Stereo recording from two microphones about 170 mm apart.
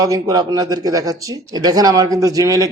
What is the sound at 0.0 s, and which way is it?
Speech, 20° right (ahead or behind).